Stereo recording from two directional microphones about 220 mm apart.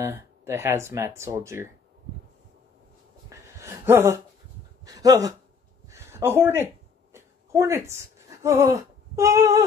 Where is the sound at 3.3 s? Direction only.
10° right (ahead or behind).